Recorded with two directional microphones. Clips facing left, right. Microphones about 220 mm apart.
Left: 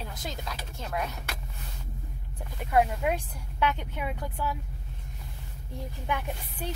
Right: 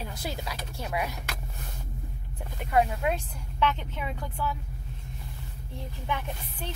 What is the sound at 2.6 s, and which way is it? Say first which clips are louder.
A woman's voice: even; centre (ahead or behind).